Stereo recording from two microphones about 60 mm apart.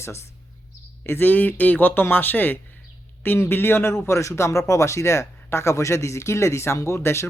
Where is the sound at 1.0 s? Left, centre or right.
Left.